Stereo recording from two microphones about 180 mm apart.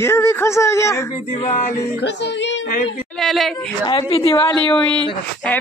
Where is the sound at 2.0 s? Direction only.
75° left (ahead or behind).